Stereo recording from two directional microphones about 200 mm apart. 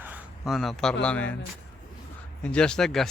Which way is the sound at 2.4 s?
5° left (ahead or behind).